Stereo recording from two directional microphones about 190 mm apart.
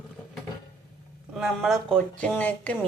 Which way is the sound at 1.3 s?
Centre (ahead or behind).